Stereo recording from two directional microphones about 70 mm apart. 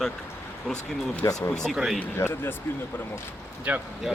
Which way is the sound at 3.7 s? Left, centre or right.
Right.